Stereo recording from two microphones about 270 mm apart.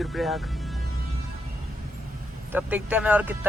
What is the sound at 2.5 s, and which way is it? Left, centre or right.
Speech, centre.